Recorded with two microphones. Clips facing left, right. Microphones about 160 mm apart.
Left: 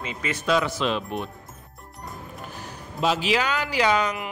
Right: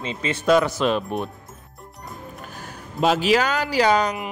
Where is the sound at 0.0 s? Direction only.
30° right (ahead or behind).